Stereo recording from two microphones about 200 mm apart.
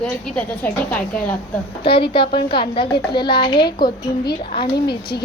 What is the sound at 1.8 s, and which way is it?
A woman's voice, 25° left (ahead or behind).